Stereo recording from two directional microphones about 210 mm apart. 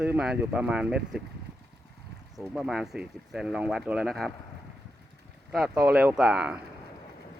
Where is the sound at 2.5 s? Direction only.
Centre (ahead or behind).